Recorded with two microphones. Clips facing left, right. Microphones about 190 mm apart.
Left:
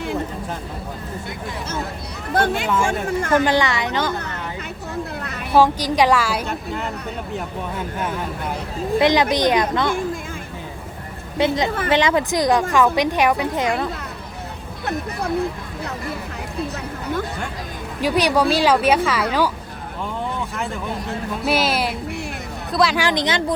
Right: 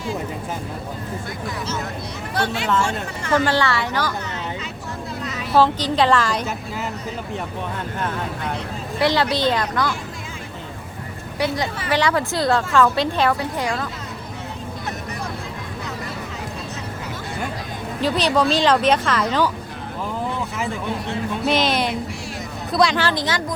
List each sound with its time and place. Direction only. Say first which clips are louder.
2.3 s speech: left 3 dB; 50° left (ahead or behind)
3.4 s speech: left 1 dB; 15° left (ahead or behind)
5.2 s vehicle: right 1 dB; 60° left (ahead or behind)
5.5 s speech: left 1 dB; 10° left (ahead or behind)
6.5 s a woman's voice: left 2 dB; 5° right (ahead or behind)
9.0 s speech: left 3 dB; 20° left (ahead or behind)
11.3 s speech: left 4 dB; 20° left (ahead or behind)
18.0 s speech: left 1 dB; 10° left (ahead or behind)
21.4 s a woman's voice: even; 5° left (ahead or behind)
23.0 s speech: left 2 dB; 15° left (ahead or behind)